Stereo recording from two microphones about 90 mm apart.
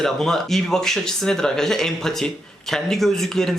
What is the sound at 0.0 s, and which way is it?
Speech, 5° left (ahead or behind).